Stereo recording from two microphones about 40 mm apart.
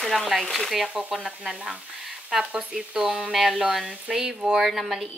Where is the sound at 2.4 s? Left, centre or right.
Right.